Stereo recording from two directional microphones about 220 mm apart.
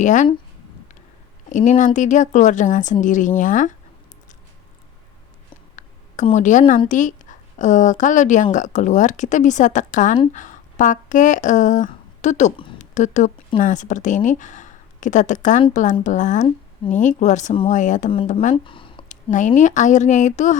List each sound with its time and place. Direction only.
0.0 s speech: 35° left (ahead or behind)
1.5 s speech: 35° left (ahead or behind)
5.7 s a sound: 35° left (ahead or behind)
6.8 s a woman's voice: 35° left (ahead or behind)
18.5 s a sound: 25° left (ahead or behind)
19.0 s speech: 35° left (ahead or behind)